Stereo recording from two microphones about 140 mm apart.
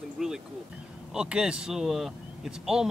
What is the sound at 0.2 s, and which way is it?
Speech, 5° right (ahead or behind).